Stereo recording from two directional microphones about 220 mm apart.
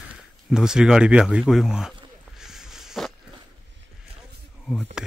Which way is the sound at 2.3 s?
Centre (ahead or behind).